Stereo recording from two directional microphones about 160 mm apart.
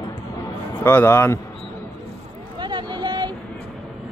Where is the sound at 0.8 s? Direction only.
15° left (ahead or behind).